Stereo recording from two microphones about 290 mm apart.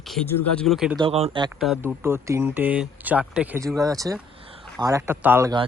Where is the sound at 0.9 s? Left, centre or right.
Centre.